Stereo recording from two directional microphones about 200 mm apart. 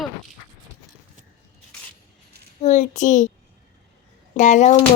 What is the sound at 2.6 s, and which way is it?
Speech, 35° left (ahead or behind).